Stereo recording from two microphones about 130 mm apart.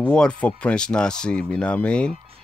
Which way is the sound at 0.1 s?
10° left (ahead or behind).